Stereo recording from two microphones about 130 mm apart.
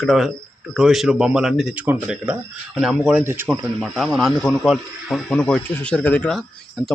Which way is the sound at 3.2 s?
15° right (ahead or behind).